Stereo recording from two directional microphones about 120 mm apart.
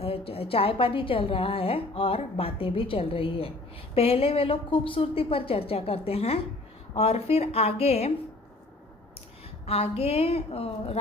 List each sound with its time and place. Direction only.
0.0 s a woman's voice: 50° left (ahead or behind)
9.7 s a woman's voice: 55° left (ahead or behind)